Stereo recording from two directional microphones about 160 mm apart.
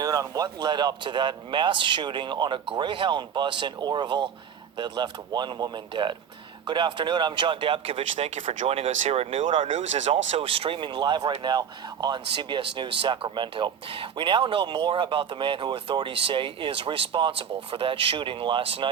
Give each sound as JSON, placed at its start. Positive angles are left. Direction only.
{"t": 0.0, "sound": "speech", "side_deg": -25}
{"t": 9.7, "sound": "speech", "side_deg": -45}